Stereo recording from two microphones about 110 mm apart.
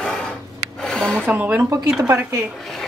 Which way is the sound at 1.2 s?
15° right (ahead or behind).